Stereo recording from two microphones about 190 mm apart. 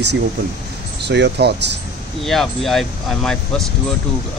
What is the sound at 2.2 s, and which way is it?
Speech, centre (ahead or behind).